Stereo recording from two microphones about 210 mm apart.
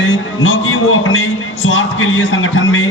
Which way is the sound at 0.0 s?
65° left (ahead or behind).